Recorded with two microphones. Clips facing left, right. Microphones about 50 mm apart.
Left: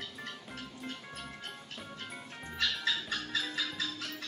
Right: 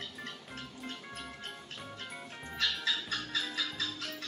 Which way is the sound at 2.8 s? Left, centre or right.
Centre.